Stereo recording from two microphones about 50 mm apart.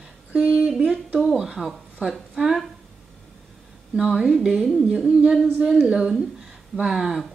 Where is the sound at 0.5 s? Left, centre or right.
Centre.